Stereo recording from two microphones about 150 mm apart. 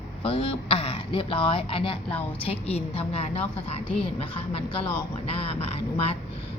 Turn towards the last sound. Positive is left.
turn(degrees=40)  # may be behind; listen again after turning